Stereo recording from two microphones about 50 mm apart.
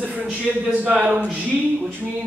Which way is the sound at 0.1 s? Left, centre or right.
Right.